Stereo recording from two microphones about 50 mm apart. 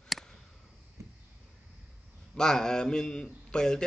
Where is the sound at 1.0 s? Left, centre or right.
Right.